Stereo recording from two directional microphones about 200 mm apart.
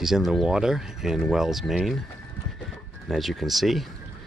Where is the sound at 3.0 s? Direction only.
Centre (ahead or behind).